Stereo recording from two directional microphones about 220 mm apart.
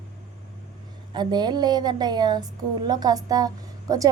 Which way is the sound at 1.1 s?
20° right (ahead or behind).